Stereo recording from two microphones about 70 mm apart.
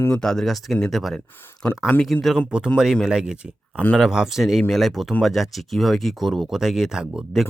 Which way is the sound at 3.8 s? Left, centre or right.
Centre.